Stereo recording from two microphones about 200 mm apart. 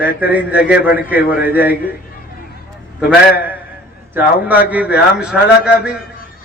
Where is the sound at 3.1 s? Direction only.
10° right (ahead or behind).